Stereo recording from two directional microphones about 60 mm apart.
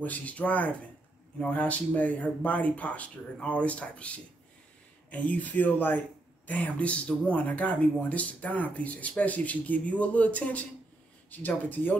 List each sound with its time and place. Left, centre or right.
0.0 s speech: left